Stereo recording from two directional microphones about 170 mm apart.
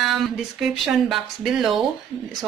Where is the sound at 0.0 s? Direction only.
Centre (ahead or behind).